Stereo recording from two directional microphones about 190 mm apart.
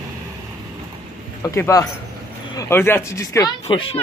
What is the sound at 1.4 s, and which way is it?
A man's voice, 15° left (ahead or behind).